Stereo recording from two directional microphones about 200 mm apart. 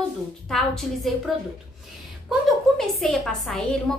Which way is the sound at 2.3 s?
Centre (ahead or behind).